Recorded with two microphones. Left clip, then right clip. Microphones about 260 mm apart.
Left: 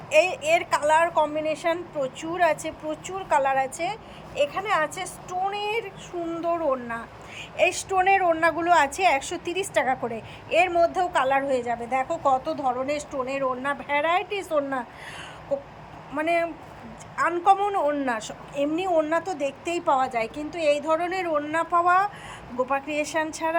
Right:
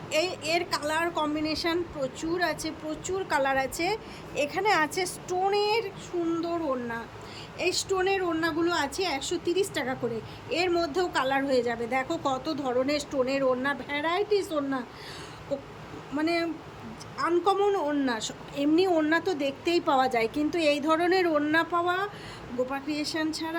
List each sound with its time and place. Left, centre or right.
0.4 s speech: centre
6.2 s a woman's voice: centre